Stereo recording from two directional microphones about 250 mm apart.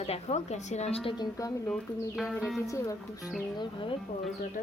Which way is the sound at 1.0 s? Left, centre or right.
Centre.